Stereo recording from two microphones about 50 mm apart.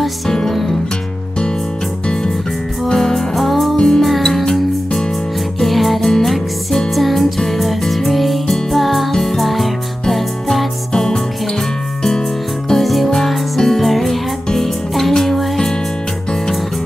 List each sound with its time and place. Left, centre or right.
2.9 s music: centre
3.7 s music: centre
12.6 s music: centre